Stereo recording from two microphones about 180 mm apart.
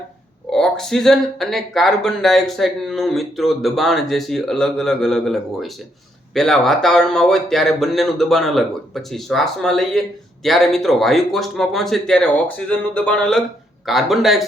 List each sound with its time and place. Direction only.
0.5 s speech: 5° left (ahead or behind)